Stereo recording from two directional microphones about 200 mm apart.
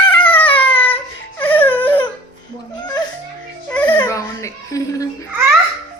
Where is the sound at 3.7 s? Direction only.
5° left (ahead or behind).